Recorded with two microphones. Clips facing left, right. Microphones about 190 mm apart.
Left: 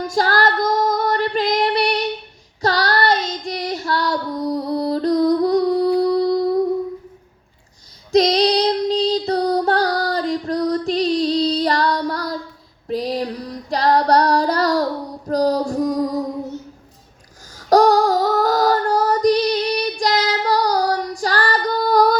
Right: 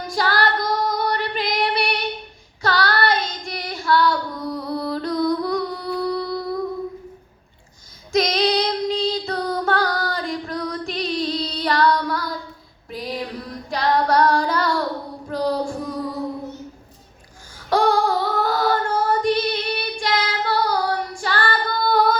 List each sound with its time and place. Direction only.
0.1 s female singing: 45° left (ahead or behind)
2.6 s child singing: 40° left (ahead or behind)
6.0 s a sound: 40° left (ahead or behind)
8.1 s female singing: 35° left (ahead or behind)
12.9 s music: 35° left (ahead or behind)
13.7 s female singing: 35° left (ahead or behind)
15.3 s a sound: 40° left (ahead or behind)
17.7 s female singing: 40° left (ahead or behind)